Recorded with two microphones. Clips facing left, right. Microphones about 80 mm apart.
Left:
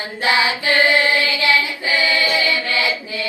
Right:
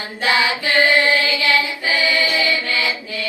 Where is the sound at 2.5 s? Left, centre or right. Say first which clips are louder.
Left 1 dB; left.